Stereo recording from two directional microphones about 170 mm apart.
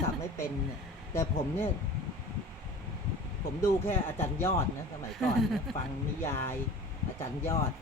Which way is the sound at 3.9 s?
15° left (ahead or behind).